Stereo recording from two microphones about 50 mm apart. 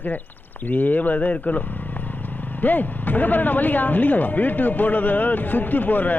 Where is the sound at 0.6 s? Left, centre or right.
Left.